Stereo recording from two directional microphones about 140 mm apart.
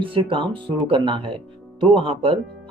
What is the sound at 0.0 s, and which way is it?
Speech, 40° right (ahead or behind).